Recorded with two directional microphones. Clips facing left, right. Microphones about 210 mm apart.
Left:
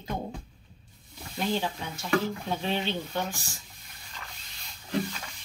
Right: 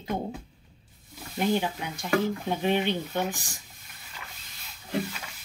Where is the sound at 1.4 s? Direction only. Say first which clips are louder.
Right 3 dB; 15° right (ahead or behind).